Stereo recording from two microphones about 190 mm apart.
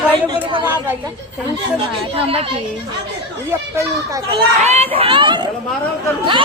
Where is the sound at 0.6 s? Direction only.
10° right (ahead or behind).